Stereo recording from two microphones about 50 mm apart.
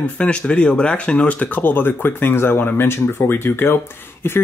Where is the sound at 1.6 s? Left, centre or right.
Left.